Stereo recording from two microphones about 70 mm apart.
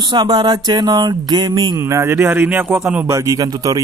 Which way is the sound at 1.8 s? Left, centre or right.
Right.